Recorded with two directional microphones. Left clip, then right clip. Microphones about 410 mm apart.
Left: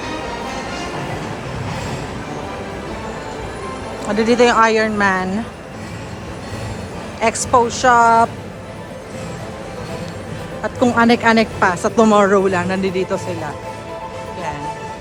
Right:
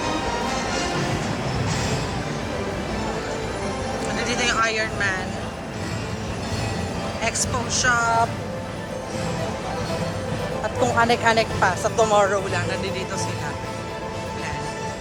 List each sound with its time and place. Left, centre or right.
0.0 s music: centre
4.2 s a woman's voice: centre
7.2 s a woman's voice: centre
10.8 s a woman's voice: centre